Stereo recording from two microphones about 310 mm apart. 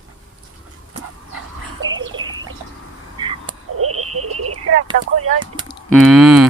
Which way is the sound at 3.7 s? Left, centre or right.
Right.